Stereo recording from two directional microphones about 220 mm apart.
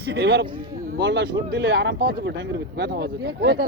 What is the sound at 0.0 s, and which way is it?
Speech, 50° right (ahead or behind).